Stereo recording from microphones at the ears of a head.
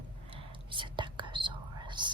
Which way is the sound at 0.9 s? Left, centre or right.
Right.